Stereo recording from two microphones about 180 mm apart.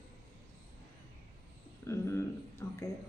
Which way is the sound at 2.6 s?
15° left (ahead or behind).